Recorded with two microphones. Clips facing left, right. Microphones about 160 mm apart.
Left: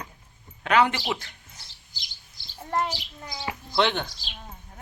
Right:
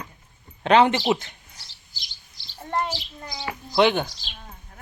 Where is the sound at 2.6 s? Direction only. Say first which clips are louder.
Right 1 dB; 5° left (ahead or behind).